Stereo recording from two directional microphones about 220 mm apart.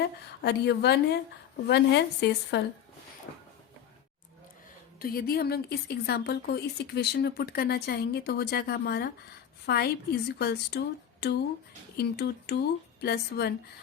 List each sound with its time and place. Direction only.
0.0 s speech: 45° left (ahead or behind)
4.9 s speech: 45° left (ahead or behind)